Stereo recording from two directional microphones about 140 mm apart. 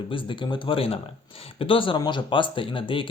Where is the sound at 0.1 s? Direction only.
35° left (ahead or behind).